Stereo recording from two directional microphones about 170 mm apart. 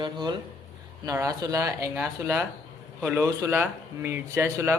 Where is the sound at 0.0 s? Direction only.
25° right (ahead or behind).